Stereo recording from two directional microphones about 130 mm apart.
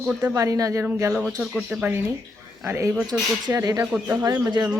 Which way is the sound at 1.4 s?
Centre (ahead or behind).